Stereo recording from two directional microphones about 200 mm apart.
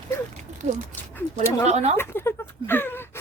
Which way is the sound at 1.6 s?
35° right (ahead or behind).